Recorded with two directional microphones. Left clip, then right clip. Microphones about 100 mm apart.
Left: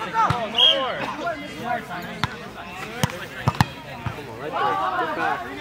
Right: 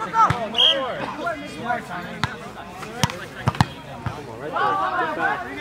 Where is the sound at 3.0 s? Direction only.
25° right (ahead or behind).